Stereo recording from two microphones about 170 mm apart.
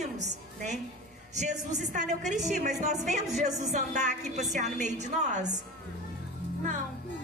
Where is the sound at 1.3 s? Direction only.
45° right (ahead or behind).